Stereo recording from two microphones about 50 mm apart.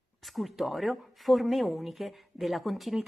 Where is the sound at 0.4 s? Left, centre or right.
Centre.